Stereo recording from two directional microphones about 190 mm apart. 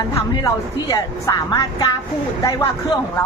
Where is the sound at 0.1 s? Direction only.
20° left (ahead or behind).